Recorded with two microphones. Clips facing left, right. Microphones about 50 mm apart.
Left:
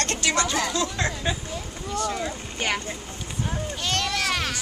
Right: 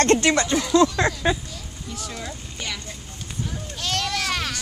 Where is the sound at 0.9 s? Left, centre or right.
Right.